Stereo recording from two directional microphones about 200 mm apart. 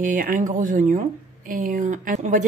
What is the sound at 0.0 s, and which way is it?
Speech, 40° right (ahead or behind).